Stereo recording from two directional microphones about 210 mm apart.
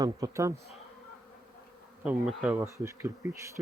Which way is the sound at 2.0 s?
5° right (ahead or behind).